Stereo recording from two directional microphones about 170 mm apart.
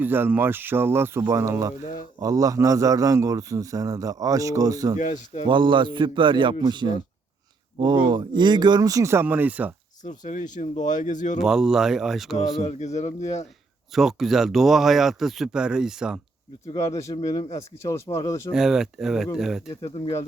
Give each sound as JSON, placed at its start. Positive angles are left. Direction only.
{"t": 0.0, "sound": "a man's voice", "side_deg": -10}
{"t": 4.9, "sound": "speech", "side_deg": 45}
{"t": 5.5, "sound": "a man's voice", "side_deg": -30}
{"t": 10.0, "sound": "speech", "side_deg": 45}
{"t": 11.4, "sound": "speech", "side_deg": -5}
{"t": 12.6, "sound": "speech", "side_deg": 40}
{"t": 13.9, "sound": "speech", "side_deg": 0}
{"t": 16.7, "sound": "speech", "side_deg": 20}
{"t": 18.5, "sound": "speech", "side_deg": -5}
{"t": 19.6, "sound": "speech", "side_deg": 35}